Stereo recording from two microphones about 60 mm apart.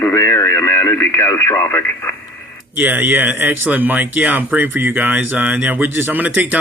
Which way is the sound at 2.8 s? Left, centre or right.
Right.